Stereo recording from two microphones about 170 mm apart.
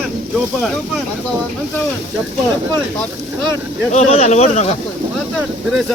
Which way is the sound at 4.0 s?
40° left (ahead or behind).